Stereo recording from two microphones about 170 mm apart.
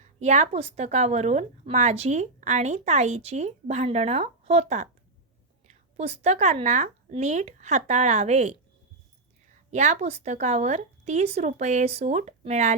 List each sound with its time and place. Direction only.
0.0 s a woman's voice: 45° right (ahead or behind)